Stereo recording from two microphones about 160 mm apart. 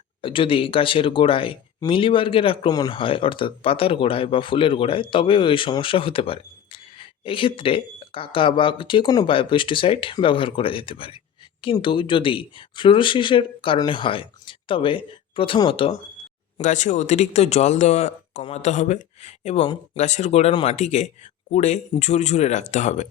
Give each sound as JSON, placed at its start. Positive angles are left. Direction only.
{"t": 0.2, "sound": "speech", "side_deg": 35}
{"t": 16.6, "sound": "speech", "side_deg": 50}
{"t": 19.6, "sound": "speech", "side_deg": 30}
{"t": 20.0, "sound": "speech", "side_deg": 45}